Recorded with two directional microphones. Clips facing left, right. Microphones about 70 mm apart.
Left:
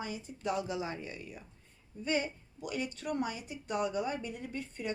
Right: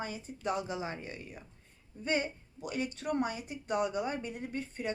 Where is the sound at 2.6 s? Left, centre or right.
Right.